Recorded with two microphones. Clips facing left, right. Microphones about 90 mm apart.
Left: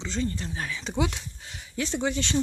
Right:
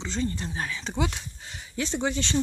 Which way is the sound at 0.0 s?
5° right (ahead or behind).